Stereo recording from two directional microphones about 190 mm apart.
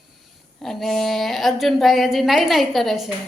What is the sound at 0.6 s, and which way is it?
Speech, centre (ahead or behind).